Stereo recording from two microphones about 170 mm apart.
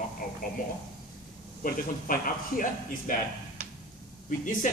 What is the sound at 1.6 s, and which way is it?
Speech, 55° left (ahead or behind).